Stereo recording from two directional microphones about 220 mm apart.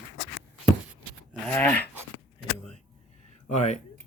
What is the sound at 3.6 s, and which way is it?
Speech, 30° left (ahead or behind).